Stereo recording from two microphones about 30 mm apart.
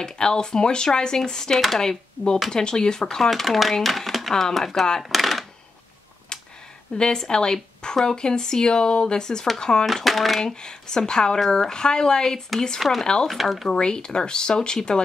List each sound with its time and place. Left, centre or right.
0.0 s speech: left
3.2 s speech: centre
5.1 s a sound: centre
6.9 s speech: left
7.2 s speech: left
10.0 s speech: centre
10.4 s speech: left
13.0 s speech: left
13.3 s speech: centre
13.7 s speech: left